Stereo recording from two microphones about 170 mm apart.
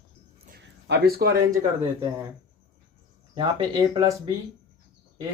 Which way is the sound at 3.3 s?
30° right (ahead or behind).